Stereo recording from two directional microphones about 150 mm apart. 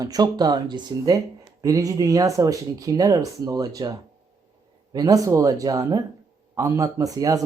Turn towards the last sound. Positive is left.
turn(degrees=-25)  # may be behind; listen again after turning